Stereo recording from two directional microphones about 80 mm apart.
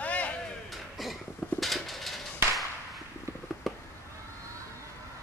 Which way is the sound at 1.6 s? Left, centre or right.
Centre.